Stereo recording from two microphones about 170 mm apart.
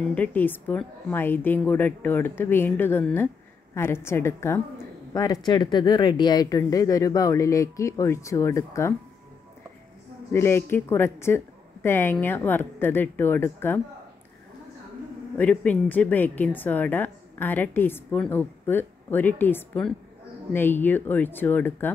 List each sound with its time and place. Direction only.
0.0 s speech: 10° left (ahead or behind)
10.3 s speech: 15° left (ahead or behind)
15.3 s speech: 10° left (ahead or behind)